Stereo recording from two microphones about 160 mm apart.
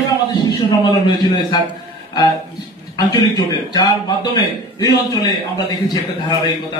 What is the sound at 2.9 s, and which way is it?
A man's voice, 25° left (ahead or behind).